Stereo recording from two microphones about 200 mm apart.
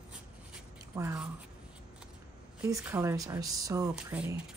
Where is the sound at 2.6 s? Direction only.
10° right (ahead or behind).